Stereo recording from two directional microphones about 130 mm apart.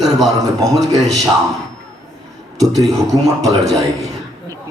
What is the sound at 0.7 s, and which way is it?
Speech, centre (ahead or behind).